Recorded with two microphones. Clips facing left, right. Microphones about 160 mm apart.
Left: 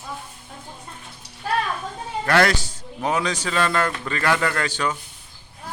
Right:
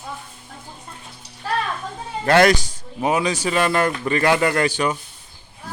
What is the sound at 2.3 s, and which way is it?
Speech, 20° right (ahead or behind).